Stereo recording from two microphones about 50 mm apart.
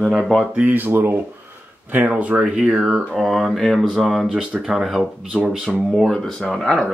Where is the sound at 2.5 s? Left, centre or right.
Centre.